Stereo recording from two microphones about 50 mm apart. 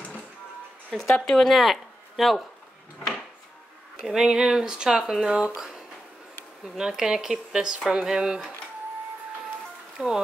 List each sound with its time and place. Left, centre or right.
0.8 s speech: centre
4.0 s speech: centre
6.8 s speech: centre
10.0 s speech: centre